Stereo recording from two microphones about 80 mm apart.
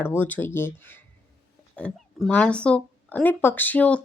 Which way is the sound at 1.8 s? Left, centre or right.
Centre.